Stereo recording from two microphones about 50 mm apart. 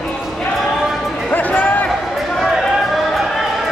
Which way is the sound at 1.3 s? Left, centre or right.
Left.